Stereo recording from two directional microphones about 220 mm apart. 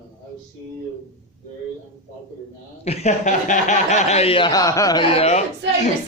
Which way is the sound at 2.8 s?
30° left (ahead or behind).